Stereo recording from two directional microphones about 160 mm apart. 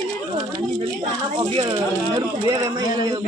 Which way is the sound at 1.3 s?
35° right (ahead or behind).